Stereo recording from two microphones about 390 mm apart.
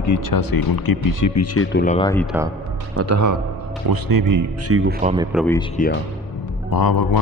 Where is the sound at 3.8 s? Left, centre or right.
Right.